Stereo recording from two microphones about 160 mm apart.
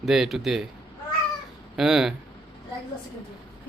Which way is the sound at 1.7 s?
5° right (ahead or behind).